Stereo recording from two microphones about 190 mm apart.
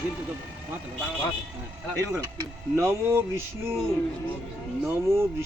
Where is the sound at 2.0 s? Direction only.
15° right (ahead or behind).